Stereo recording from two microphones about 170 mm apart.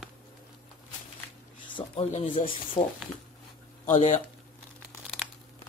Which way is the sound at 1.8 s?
35° left (ahead or behind).